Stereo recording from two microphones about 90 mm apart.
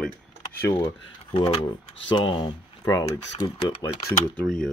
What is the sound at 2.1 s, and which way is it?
Speech, 70° left (ahead or behind).